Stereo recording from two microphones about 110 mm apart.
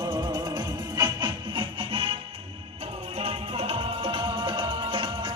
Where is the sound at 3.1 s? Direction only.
65° right (ahead or behind).